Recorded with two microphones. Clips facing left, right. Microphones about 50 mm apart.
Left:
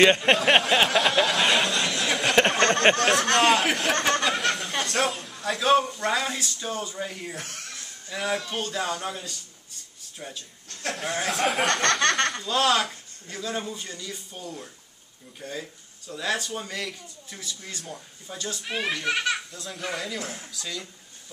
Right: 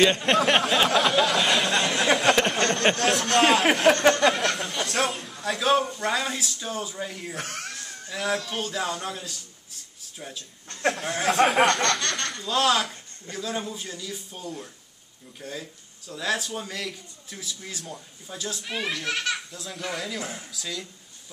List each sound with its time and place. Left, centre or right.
0.2 s a sound: centre
3.0 s a man's voice: centre
7.3 s speech: right
8.1 s speech: centre
10.7 s speech: right
11.1 s speech: centre